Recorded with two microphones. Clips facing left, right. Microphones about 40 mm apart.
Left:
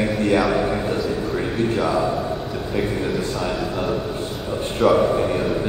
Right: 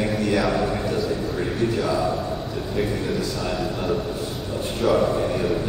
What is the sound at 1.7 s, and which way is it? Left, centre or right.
Speech, left.